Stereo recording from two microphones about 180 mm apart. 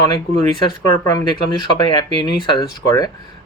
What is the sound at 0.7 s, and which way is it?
Speech, 25° left (ahead or behind).